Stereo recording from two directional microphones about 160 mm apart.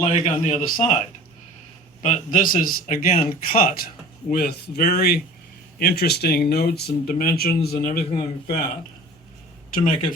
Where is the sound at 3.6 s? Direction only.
65° left (ahead or behind).